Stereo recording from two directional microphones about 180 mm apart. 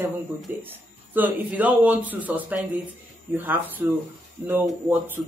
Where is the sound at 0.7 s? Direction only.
10° right (ahead or behind).